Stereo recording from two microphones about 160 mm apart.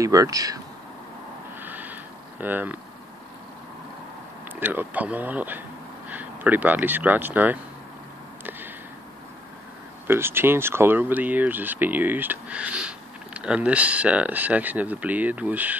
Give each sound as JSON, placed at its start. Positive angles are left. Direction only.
{"t": 0.0, "sound": "speech", "side_deg": -20}
{"t": 1.6, "sound": "a sound", "side_deg": -10}
{"t": 2.4, "sound": "speech", "side_deg": -10}
{"t": 4.6, "sound": "speech", "side_deg": -10}
{"t": 10.0, "sound": "speech", "side_deg": -15}